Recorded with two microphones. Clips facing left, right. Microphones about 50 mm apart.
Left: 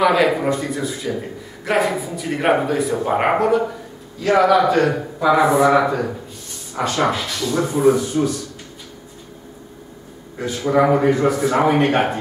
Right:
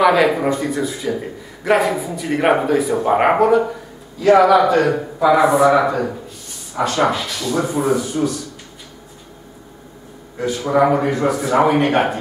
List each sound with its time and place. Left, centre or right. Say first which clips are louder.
0.0 s a man's voice: right 2 dB; centre
10.4 s a man's voice: right 1 dB; centre